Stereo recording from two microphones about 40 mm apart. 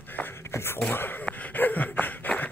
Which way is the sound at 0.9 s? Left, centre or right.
Left.